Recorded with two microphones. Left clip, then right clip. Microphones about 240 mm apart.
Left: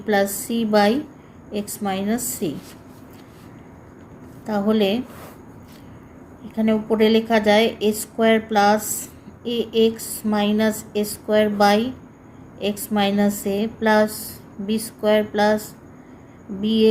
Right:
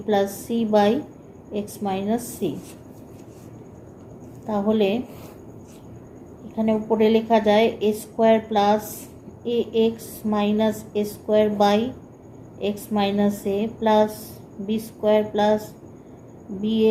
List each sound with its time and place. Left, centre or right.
0.0 s a woman's voice: left
4.4 s a woman's voice: left
6.6 s a woman's voice: left